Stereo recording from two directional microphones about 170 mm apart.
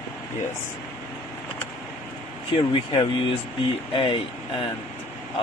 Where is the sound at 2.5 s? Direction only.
30° left (ahead or behind).